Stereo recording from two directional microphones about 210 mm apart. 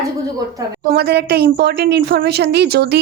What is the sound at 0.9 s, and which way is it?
A woman's voice, 50° right (ahead or behind).